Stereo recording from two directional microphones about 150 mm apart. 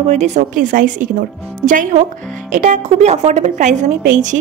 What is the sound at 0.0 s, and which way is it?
A woman's voice, 50° right (ahead or behind).